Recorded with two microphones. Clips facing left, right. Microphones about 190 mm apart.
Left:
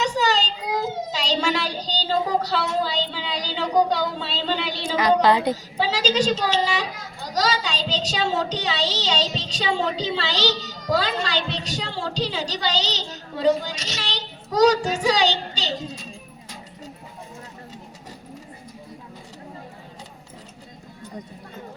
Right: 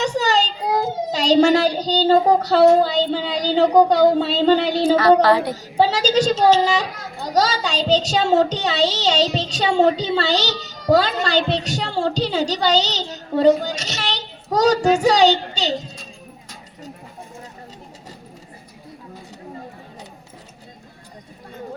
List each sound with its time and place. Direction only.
0.0 s a child's voice: 45° right (ahead or behind)
4.9 s a woman's voice: 15° left (ahead or behind)
5.7 s a child's voice: 45° right (ahead or behind)